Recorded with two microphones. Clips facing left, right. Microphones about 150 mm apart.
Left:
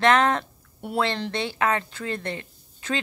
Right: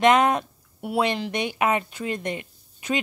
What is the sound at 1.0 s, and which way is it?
Speech, 15° right (ahead or behind).